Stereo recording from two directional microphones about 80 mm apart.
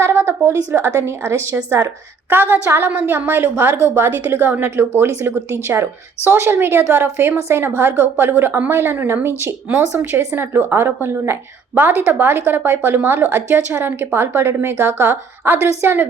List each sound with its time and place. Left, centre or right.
0.0 s a woman's voice: right
2.3 s speech: right